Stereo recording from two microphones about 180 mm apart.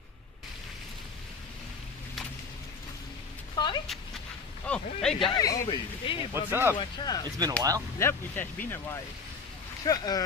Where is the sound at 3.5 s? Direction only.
25° left (ahead or behind).